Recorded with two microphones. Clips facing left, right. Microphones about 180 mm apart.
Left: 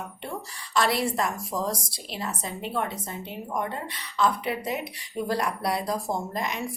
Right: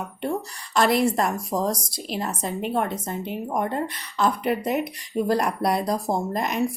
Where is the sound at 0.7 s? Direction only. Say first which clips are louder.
Right 5 dB; 50° right (ahead or behind).